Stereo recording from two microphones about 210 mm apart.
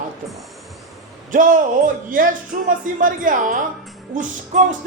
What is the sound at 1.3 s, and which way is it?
Speech, 40° right (ahead or behind).